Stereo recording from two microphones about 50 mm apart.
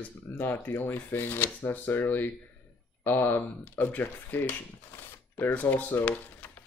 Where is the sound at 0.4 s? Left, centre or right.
Left.